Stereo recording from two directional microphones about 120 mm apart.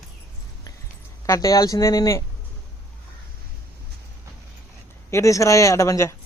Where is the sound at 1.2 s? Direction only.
30° left (ahead or behind).